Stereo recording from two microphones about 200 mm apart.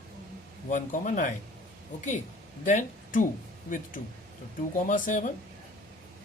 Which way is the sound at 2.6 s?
40° left (ahead or behind).